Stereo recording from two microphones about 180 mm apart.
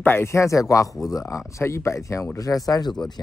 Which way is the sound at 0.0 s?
15° left (ahead or behind).